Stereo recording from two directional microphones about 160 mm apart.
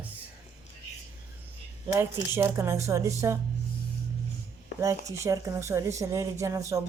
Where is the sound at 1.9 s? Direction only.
15° right (ahead or behind).